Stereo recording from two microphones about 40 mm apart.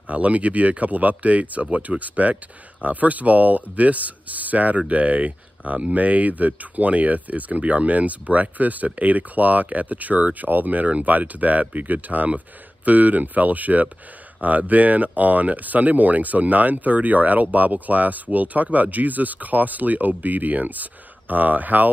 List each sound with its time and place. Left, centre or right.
0.0 s speech: right